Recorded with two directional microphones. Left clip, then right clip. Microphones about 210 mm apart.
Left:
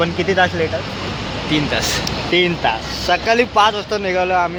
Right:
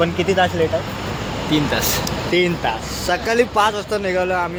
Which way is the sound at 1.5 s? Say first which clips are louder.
Left 1 dB; 20° right (ahead or behind).